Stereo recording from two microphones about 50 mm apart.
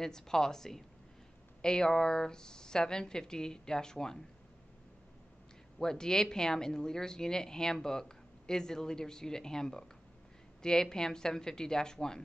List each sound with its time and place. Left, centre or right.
0.0 s speech: centre
5.8 s speech: centre